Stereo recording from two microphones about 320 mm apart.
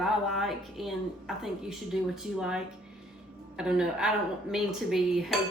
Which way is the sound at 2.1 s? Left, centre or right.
Centre.